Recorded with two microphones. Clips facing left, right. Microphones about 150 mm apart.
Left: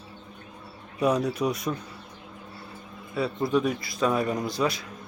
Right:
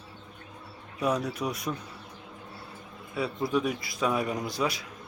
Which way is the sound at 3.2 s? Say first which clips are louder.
Left 3 dB; 10° right (ahead or behind).